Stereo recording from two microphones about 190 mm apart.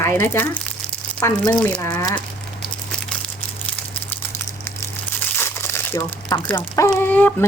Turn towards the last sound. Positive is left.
turn(degrees=10)  # may be behind; listen again after turning